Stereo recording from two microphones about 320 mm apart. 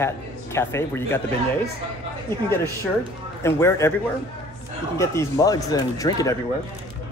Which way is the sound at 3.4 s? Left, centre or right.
Centre.